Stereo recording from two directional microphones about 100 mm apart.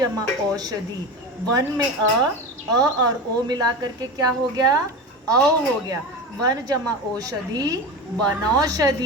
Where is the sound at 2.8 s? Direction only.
40° right (ahead or behind).